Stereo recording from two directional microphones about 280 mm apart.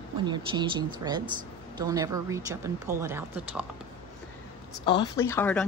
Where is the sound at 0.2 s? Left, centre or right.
Centre.